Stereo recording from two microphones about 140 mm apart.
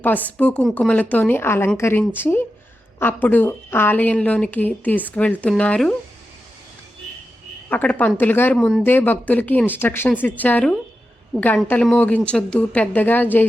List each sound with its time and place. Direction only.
0.0 s a woman's voice: 10° left (ahead or behind)
7.7 s a woman's voice: 10° left (ahead or behind)
8.5 s speech: 5° left (ahead or behind)
8.8 s a woman's voice: 15° left (ahead or behind)